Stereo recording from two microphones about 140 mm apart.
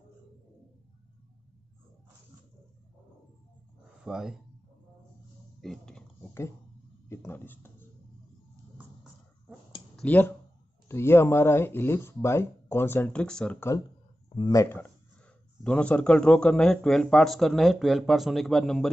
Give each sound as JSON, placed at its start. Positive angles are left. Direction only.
{"t": 4.0, "sound": "speech", "side_deg": -5}
{"t": 5.6, "sound": "a sound", "side_deg": 5}
{"t": 7.1, "sound": "speech", "side_deg": 15}
{"t": 8.7, "sound": "a sound", "side_deg": -10}
{"t": 9.9, "sound": "speech", "side_deg": 10}
{"t": 14.3, "sound": "speech", "side_deg": 30}
{"t": 15.6, "sound": "speech", "side_deg": 10}